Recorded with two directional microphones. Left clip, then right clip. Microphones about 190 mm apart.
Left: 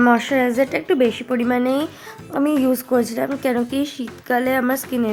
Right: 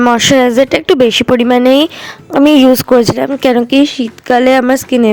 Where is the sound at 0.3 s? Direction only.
55° right (ahead or behind).